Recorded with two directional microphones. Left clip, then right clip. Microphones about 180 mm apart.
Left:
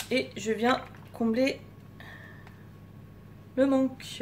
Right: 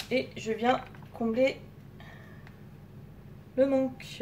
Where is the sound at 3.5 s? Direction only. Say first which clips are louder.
Even; 15° left (ahead or behind).